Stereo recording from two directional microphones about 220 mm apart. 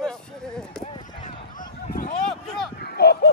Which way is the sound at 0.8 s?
25° left (ahead or behind).